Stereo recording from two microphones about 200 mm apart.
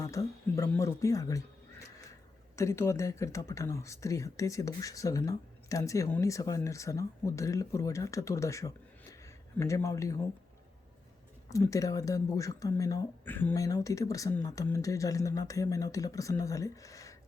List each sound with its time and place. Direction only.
0.0 s speech: 15° left (ahead or behind)
2.6 s speech: 15° left (ahead or behind)
11.4 s speech: 15° left (ahead or behind)